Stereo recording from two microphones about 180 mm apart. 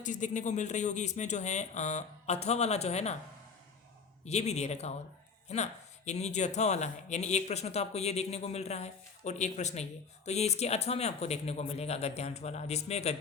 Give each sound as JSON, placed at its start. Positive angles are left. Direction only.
{"t": 0.0, "sound": "speech", "side_deg": 45}
{"t": 4.3, "sound": "speech", "side_deg": 35}